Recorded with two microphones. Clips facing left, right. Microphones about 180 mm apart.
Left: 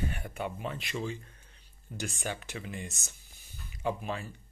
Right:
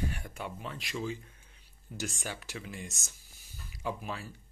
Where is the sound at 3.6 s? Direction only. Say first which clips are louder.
Left 4 dB; centre (ahead or behind).